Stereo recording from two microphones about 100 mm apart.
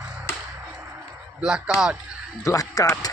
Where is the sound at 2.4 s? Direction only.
35° left (ahead or behind).